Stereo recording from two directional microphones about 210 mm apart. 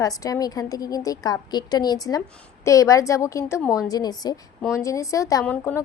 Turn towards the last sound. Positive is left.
turn(degrees=10)  # may be behind; listen again after turning